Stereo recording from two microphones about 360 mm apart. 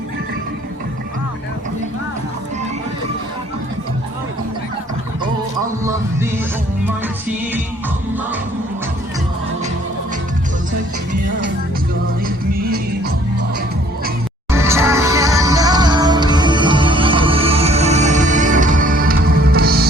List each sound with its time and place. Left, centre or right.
5.8 s speech: centre
12.2 s music: right
14.5 s music: centre; by 19.9 s right